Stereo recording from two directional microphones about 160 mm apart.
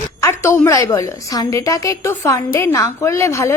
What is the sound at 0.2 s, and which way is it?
A woman's voice, 15° left (ahead or behind).